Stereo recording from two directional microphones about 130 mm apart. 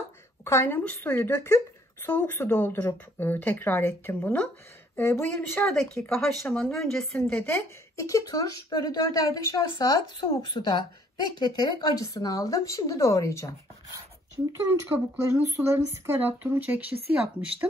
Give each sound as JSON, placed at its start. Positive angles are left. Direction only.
{"t": 0.5, "sound": "speech", "side_deg": 15}
{"t": 5.7, "sound": "speech", "side_deg": 5}
{"t": 7.4, "sound": "speech", "side_deg": 20}
{"t": 15.4, "sound": "speech", "side_deg": -20}